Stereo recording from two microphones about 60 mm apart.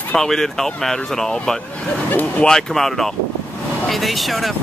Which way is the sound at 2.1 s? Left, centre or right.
Left.